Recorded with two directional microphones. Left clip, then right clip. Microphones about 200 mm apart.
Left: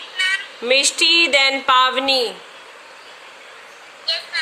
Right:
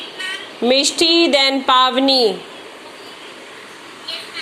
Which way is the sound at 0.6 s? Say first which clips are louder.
Right 2 dB; 30° left (ahead or behind).